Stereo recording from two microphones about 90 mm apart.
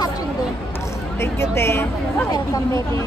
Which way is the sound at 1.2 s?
30° left (ahead or behind).